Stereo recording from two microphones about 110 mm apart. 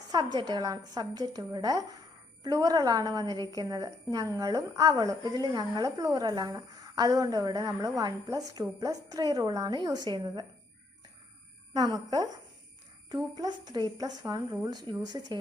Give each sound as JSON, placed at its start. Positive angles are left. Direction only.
{"t": 0.1, "sound": "a woman's voice", "side_deg": -40}
{"t": 11.7, "sound": "a woman's voice", "side_deg": -35}